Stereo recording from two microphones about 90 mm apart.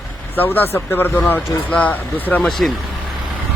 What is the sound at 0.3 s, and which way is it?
Speech, 20° left (ahead or behind).